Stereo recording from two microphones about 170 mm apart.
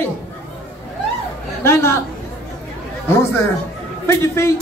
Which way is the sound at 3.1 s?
15° left (ahead or behind).